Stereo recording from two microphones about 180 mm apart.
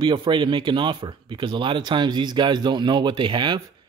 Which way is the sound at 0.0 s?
25° right (ahead or behind).